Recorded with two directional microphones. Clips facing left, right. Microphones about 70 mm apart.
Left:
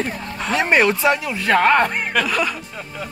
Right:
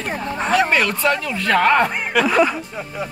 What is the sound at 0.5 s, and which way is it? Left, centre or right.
Speech, left.